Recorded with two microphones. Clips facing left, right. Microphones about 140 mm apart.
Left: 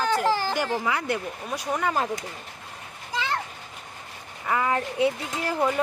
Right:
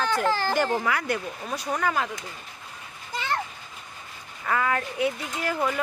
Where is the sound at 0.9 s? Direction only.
25° left (ahead or behind).